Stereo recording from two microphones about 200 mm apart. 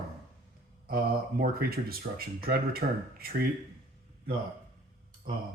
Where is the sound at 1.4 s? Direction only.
50° right (ahead or behind).